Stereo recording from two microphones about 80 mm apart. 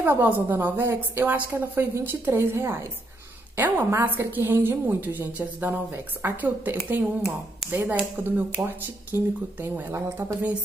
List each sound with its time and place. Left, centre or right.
0.0 s a woman's voice: right